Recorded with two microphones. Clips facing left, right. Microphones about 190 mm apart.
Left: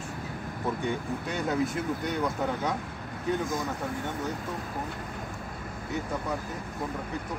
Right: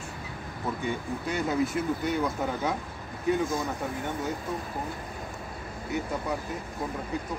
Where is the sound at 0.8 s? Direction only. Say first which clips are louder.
Even; centre (ahead or behind).